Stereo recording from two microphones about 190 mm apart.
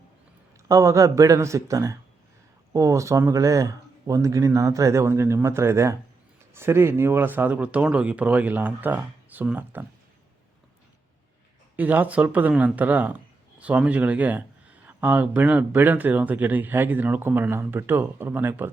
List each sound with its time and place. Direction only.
0.7 s speech: 15° right (ahead or behind)
11.8 s speech: 10° right (ahead or behind)